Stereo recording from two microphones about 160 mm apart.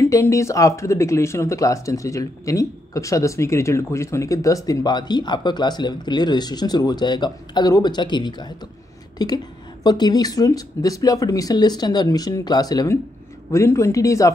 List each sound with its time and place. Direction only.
0.0 s speech: 20° left (ahead or behind)